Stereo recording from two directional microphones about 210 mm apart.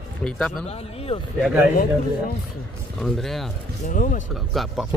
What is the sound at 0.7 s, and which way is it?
Speech, 30° left (ahead or behind).